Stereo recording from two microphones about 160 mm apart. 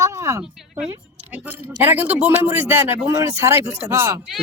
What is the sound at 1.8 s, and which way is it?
Speech, 10° right (ahead or behind).